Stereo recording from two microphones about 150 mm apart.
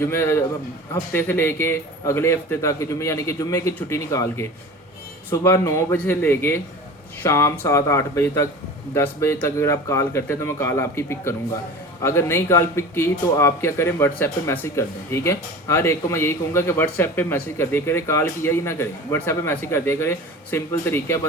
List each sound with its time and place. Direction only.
0.0 s a man's voice: 15° left (ahead or behind)